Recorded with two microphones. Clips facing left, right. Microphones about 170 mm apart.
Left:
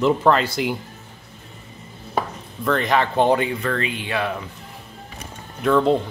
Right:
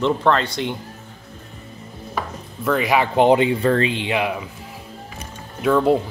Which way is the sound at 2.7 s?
10° right (ahead or behind).